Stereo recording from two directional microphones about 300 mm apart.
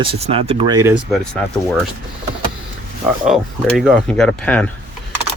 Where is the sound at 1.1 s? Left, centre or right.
Centre.